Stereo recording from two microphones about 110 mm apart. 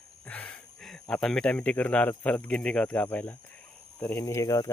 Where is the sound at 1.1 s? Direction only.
5° left (ahead or behind).